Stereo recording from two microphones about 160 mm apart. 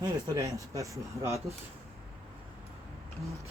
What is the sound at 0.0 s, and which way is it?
Speech, 20° right (ahead or behind).